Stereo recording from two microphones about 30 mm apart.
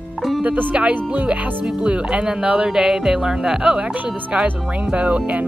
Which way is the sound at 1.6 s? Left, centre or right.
Right.